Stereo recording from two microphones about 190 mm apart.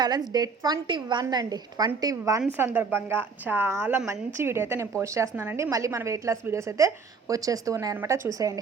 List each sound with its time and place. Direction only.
0.0 s a woman's voice: 20° right (ahead or behind)